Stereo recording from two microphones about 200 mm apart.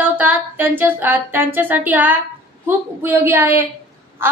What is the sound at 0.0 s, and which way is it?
A woman's voice, 10° right (ahead or behind).